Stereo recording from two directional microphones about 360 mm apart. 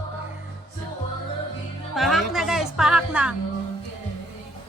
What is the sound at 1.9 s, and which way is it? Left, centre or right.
Music, centre.